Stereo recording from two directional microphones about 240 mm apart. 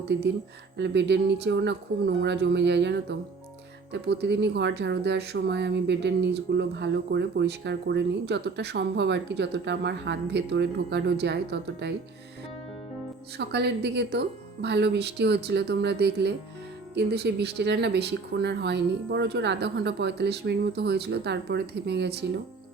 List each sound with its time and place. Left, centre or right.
0.1 s speech: right
13.3 s speech: right